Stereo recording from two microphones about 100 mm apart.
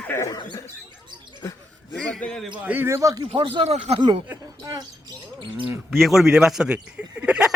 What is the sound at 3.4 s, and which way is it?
Speech, 80° right.